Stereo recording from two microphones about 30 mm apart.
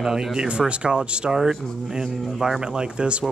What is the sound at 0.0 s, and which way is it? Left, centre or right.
Speech, right.